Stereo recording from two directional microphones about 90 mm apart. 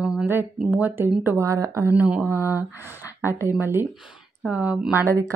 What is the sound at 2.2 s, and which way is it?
Speech, 25° right (ahead or behind).